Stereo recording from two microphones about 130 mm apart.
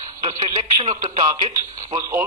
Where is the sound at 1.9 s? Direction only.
25° right (ahead or behind).